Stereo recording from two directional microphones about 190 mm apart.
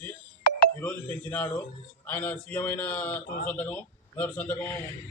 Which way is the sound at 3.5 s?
10° left (ahead or behind).